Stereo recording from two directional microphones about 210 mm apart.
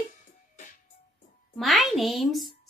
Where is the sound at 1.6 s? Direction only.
Centre (ahead or behind).